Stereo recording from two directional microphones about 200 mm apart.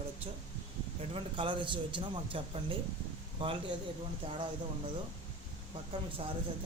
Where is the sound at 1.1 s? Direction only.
25° right (ahead or behind).